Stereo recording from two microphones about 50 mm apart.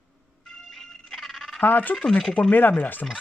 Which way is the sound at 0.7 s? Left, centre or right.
Centre.